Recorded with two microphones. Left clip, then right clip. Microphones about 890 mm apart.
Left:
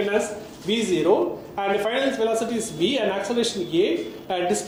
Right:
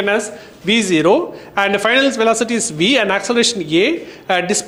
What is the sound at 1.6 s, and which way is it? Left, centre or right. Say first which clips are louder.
A woman's voice: right 9 dB; right.